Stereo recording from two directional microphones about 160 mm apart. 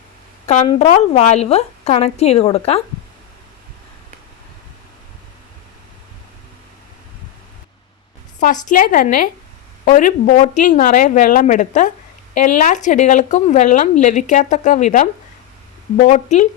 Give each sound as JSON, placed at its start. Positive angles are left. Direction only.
{"t": 0.4, "sound": "a woman's voice", "side_deg": 45}
{"t": 8.4, "sound": "a woman's voice", "side_deg": 55}